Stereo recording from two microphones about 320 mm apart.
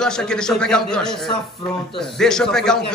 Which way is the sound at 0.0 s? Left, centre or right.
Centre.